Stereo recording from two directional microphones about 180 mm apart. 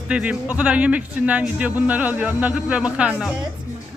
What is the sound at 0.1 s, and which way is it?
Speech, 5° right (ahead or behind).